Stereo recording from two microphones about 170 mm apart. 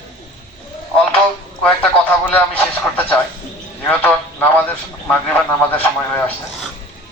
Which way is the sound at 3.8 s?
10° left (ahead or behind).